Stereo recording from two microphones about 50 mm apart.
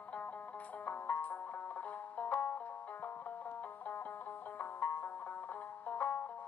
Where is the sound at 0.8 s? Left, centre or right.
Left.